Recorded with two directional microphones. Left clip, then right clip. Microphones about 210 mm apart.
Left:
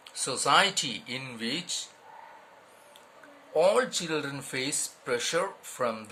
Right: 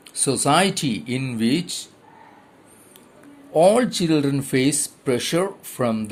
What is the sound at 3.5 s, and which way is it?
Speech, 25° right (ahead or behind).